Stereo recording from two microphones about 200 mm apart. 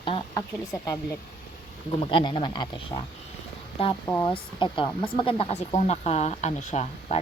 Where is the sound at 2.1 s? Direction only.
25° left (ahead or behind).